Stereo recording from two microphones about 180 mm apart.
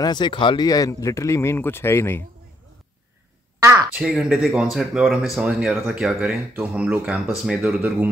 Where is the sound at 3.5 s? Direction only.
15° right (ahead or behind).